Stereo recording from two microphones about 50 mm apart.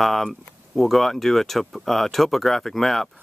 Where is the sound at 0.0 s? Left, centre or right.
Centre.